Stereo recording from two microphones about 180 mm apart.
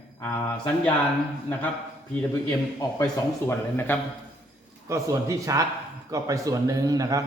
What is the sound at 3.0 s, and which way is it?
Speech, 10° left (ahead or behind).